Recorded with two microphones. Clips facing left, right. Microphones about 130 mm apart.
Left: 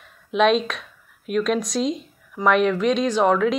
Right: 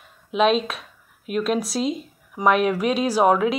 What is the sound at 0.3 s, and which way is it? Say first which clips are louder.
Speech: left 1 dB; centre (ahead or behind).